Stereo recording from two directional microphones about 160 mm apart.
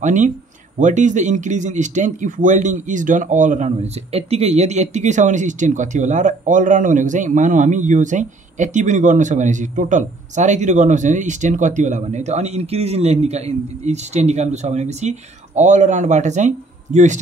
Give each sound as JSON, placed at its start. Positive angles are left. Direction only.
{"t": 0.0, "sound": "speech", "side_deg": -50}